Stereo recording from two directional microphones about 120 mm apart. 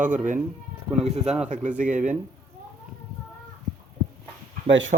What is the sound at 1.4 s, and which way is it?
Speech, 90° right.